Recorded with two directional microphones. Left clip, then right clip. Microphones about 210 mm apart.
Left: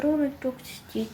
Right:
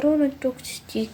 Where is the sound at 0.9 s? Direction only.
55° right (ahead or behind).